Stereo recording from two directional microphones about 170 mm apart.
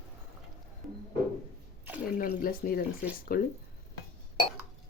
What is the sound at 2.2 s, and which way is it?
Speech, 60° left (ahead or behind).